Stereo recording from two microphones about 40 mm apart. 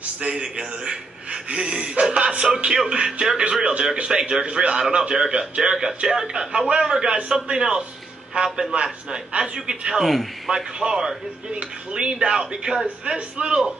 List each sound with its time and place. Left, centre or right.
0.2 s a man's voice: right
9.4 s a man's voice: centre
10.0 s a man's voice: centre
10.5 s a man's voice: centre